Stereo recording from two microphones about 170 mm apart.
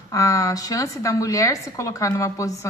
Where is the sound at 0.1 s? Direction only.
20° left (ahead or behind).